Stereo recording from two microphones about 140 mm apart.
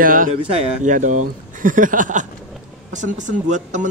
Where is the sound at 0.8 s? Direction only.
65° right (ahead or behind).